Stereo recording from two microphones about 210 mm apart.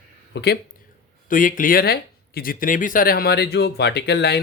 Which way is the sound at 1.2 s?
40° left (ahead or behind).